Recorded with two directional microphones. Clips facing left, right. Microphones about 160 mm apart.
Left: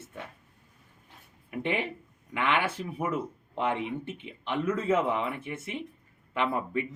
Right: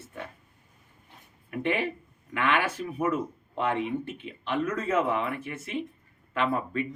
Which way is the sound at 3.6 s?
20° left (ahead or behind).